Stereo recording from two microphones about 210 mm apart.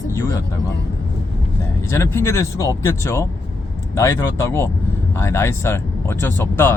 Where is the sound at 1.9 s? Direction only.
10° left (ahead or behind).